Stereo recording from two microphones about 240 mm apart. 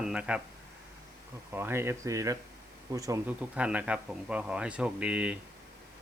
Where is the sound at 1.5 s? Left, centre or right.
Centre.